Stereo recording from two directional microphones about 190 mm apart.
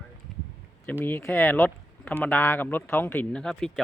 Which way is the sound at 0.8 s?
10° left (ahead or behind).